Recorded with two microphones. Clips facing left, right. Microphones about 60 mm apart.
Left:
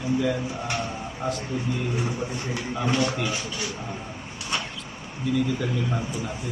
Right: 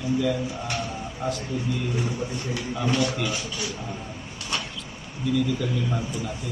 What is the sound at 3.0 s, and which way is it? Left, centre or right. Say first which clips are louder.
Speech: even; left.